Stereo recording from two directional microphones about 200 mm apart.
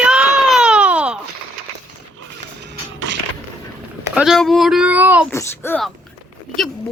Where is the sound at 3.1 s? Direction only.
65° right (ahead or behind).